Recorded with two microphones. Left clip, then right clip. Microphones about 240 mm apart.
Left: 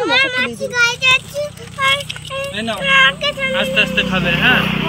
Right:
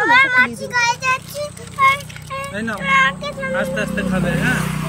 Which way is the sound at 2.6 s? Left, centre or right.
Centre.